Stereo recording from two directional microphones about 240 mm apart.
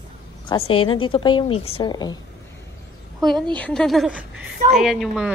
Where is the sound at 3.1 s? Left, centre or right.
Centre.